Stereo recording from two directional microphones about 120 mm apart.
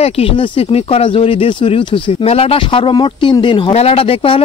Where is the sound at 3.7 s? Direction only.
60° left (ahead or behind).